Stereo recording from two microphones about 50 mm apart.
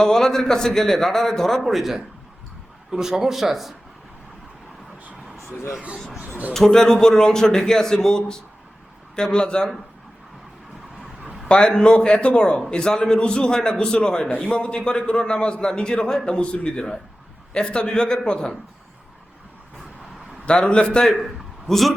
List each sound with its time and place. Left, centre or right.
0.0 s a man's voice: centre
6.5 s a man's voice: centre
11.4 s a man's voice: centre
20.4 s a man's voice: left
21.7 s a man's voice: centre